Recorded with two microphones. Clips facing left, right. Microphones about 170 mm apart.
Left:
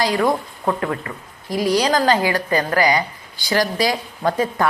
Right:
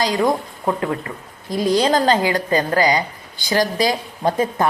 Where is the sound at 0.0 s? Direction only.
20° right (ahead or behind).